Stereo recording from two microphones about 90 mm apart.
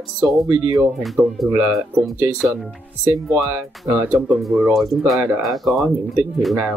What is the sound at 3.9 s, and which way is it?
Speech, 20° right (ahead or behind).